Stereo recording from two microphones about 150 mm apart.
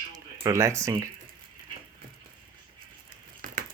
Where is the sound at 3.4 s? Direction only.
65° right (ahead or behind).